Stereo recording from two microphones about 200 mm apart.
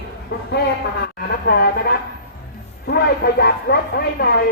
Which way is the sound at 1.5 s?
50° left (ahead or behind).